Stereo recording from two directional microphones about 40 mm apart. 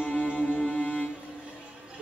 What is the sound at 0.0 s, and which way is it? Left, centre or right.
Music, left.